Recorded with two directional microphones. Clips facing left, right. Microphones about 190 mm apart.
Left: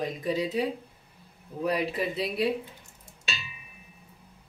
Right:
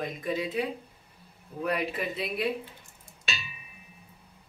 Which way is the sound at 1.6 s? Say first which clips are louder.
Left 2 dB; 35° left (ahead or behind).